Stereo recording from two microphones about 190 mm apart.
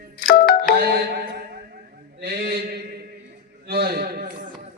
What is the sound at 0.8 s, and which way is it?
Music, 55° right (ahead or behind).